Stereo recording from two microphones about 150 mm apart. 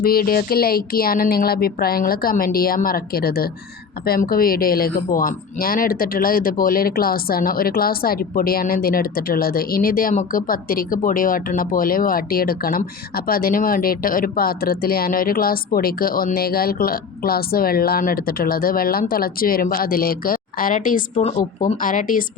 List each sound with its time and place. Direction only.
0.0 s a woman's voice: 80° left; by 21.2 s 60° left (ahead or behind)
21.2 s speech: 50° left (ahead or behind)